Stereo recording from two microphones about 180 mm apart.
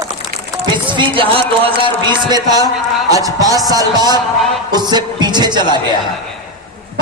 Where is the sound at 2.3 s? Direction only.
20° right (ahead or behind).